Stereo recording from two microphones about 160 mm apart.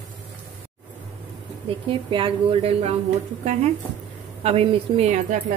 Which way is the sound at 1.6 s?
35° right (ahead or behind).